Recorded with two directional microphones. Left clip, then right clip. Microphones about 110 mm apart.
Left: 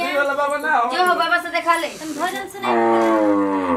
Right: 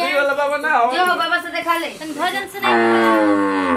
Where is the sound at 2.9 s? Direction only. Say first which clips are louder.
Right 2 dB; 50° right (ahead or behind).